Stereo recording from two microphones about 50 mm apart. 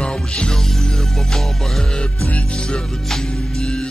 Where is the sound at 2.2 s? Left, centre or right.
Left.